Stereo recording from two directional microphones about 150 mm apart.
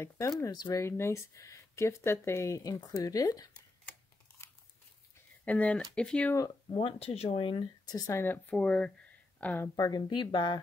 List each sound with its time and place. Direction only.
0.4 s speech: 25° left (ahead or behind)
5.4 s speech: 10° left (ahead or behind)
6.3 s speech: 25° left (ahead or behind)
6.8 s speech: 40° left (ahead or behind); by 9.7 s 10° left (ahead or behind)
9.8 s speech: 25° left (ahead or behind)